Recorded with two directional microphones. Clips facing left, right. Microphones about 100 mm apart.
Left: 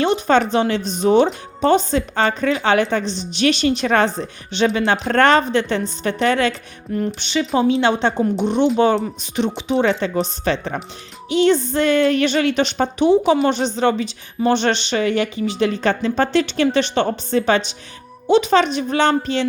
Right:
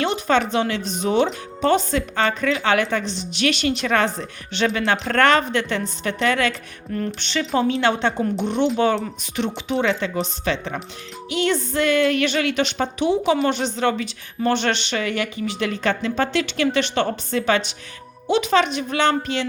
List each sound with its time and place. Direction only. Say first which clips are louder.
0.0 s a woman's voice: left 4 dB; 35° left (ahead or behind)
7.2 s speech: left 2 dB; 15° left (ahead or behind)
8.5 s speech: left 3 dB; 5° left (ahead or behind)
9.6 s speech: left 5 dB; 25° left (ahead or behind)
9.8 s a woman's voice: left 2 dB; 40° left (ahead or behind)
11.3 s a woman's voice: left 6 dB; 30° left (ahead or behind)